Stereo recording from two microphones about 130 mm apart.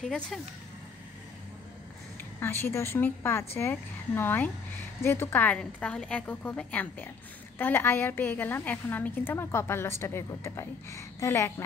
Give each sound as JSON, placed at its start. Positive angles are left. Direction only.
{"t": 0.0, "sound": "speech", "side_deg": 0}
{"t": 2.4, "sound": "a woman's voice", "side_deg": 20}